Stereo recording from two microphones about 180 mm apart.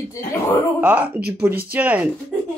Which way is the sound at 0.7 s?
10° right (ahead or behind).